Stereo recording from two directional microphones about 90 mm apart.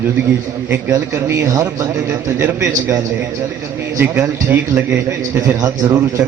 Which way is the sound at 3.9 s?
25° right (ahead or behind).